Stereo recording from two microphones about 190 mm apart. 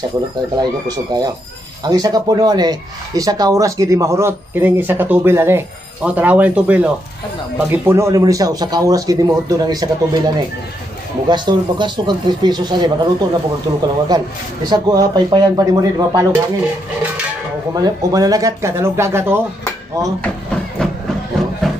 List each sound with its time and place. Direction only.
0.6 s speech: 20° right (ahead or behind)
17.7 s speech: 20° right (ahead or behind)